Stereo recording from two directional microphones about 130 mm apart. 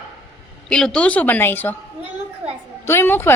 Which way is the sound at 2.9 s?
15° left (ahead or behind).